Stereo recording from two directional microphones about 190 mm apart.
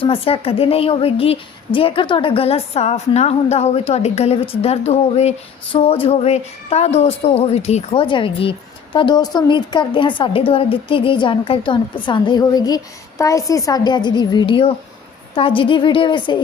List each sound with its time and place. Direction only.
0.0 s a woman's voice: 30° left (ahead or behind)